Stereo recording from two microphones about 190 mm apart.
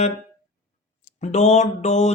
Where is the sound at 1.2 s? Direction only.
35° left (ahead or behind).